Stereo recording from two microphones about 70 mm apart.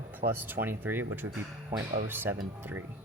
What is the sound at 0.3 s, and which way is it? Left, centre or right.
Speech, right.